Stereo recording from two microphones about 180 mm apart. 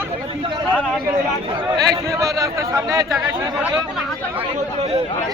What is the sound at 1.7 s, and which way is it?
Speech, 20° right (ahead or behind).